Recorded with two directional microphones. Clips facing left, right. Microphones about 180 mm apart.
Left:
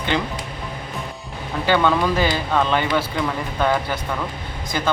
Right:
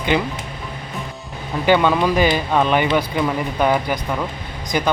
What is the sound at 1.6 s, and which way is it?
Speech, 15° right (ahead or behind).